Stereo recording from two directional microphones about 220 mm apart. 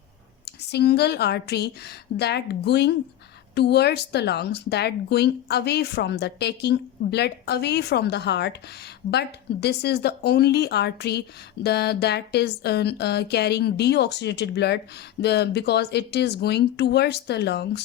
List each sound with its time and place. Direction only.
0.4 s a woman's voice: 50° left (ahead or behind)